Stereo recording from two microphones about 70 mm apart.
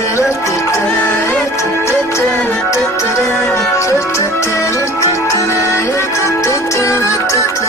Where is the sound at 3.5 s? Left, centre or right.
Left.